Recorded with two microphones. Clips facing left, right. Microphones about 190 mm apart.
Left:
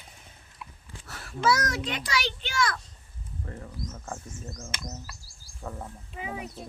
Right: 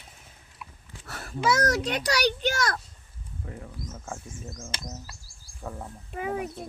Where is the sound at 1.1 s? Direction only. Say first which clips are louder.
Right 5 dB; 55° right (ahead or behind).